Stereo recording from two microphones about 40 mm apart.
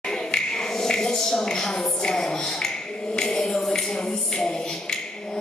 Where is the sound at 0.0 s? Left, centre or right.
Centre.